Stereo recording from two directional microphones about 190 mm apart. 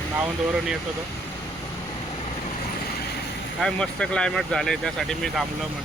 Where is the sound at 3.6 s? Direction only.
5° left (ahead or behind).